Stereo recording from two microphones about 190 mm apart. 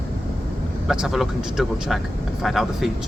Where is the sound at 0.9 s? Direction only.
Centre (ahead or behind).